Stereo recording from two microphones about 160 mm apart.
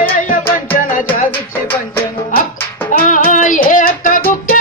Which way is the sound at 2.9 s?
55° left (ahead or behind).